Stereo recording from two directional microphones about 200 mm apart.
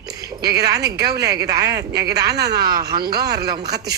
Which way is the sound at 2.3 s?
55° right (ahead or behind).